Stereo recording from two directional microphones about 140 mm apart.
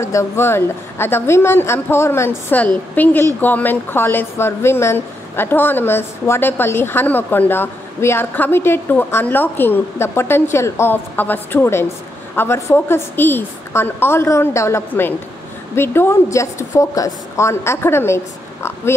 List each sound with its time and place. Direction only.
0.0 s a woman's voice: 20° left (ahead or behind)